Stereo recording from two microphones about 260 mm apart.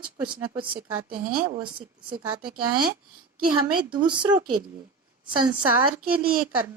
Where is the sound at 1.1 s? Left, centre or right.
Right.